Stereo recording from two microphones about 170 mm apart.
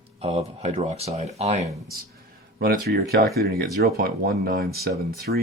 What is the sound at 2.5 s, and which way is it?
Speech, 65° right (ahead or behind).